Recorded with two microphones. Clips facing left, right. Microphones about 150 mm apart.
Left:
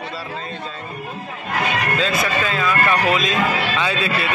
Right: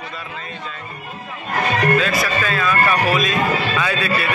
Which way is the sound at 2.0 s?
20° left (ahead or behind).